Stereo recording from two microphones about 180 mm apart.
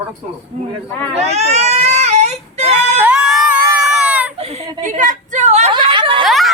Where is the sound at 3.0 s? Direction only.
5° right (ahead or behind).